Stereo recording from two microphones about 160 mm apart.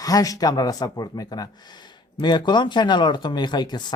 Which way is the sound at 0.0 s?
20° left (ahead or behind).